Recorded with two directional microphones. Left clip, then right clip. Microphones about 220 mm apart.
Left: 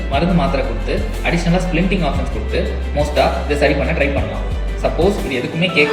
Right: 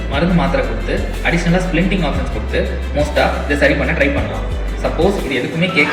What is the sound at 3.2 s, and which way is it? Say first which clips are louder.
Speech: even; 5° left (ahead or behind).